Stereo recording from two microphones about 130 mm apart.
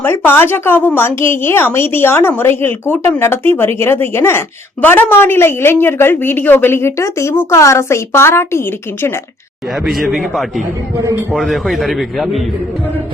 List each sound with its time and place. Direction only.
0.0 s a woman's voice: 15° left (ahead or behind)
9.8 s a man's voice: centre (ahead or behind)